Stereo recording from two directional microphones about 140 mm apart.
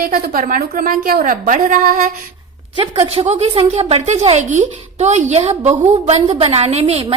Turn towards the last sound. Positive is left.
turn(degrees=-50)  # may be behind; listen again after turning